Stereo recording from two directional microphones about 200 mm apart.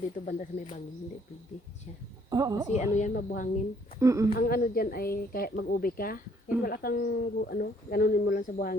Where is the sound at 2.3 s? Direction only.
20° right (ahead or behind).